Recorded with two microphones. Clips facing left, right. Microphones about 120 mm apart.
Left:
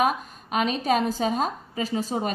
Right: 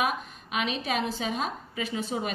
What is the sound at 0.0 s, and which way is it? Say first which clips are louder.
A woman's voice: left 5 dB; 40° left (ahead or behind).